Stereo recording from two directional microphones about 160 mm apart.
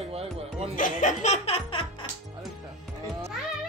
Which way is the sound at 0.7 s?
55° left (ahead or behind).